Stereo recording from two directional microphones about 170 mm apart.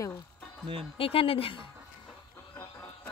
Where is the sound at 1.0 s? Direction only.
35° left (ahead or behind).